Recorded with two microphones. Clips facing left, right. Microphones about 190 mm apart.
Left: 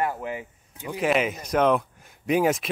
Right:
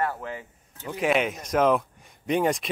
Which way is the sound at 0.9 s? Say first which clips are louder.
Left 1 dB; centre (ahead or behind).